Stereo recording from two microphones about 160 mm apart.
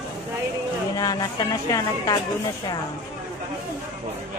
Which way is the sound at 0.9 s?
25° left (ahead or behind).